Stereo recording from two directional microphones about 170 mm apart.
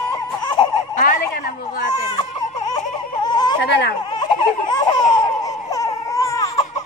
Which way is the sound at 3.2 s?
25° left (ahead or behind).